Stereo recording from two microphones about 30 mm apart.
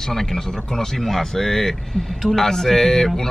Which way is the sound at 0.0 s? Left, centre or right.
Centre.